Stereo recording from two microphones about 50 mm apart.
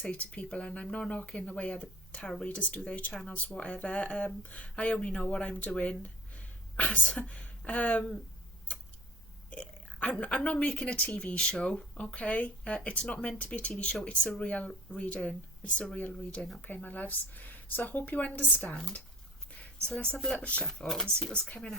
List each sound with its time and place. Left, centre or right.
0.0 s speech: left
9.5 s speech: left
18.7 s speech: centre
19.5 s a sound: left
19.9 s speech: centre
20.1 s speech: centre
20.4 s speech: left
20.8 s speech: centre
21.2 s speech: centre